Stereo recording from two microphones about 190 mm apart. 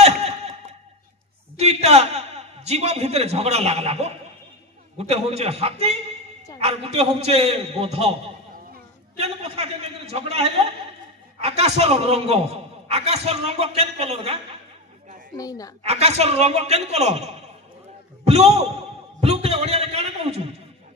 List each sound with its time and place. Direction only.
0.0 s a sound: 35° right (ahead or behind)
1.6 s a man's voice: 35° right (ahead or behind)
9.1 s a man's voice: 35° right (ahead or behind)
15.3 s a woman's voice: 20° left (ahead or behind)
15.8 s a man's voice: 35° right (ahead or behind)